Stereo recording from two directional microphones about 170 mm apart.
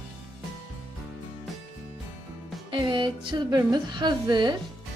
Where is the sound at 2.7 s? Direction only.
30° right (ahead or behind).